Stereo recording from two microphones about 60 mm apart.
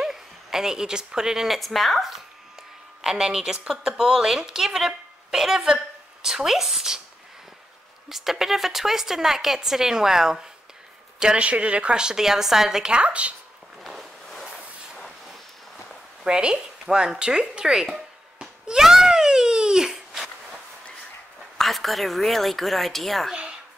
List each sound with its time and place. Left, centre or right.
0.0 s a woman's voice: centre
8.1 s a woman's voice: centre
13.8 s a sound: centre
16.3 s a woman's voice: centre
17.9 s a sound: centre
21.5 s speech: centre